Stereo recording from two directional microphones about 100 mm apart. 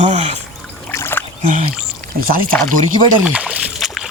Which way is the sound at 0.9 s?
20° left (ahead or behind).